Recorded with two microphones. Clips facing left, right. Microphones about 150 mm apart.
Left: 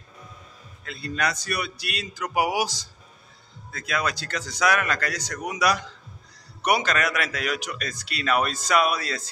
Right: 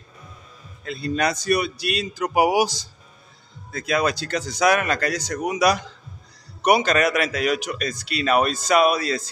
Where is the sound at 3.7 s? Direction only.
25° right (ahead or behind).